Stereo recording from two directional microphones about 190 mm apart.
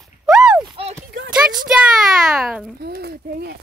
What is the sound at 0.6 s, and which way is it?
Clip-clop, 25° right (ahead or behind).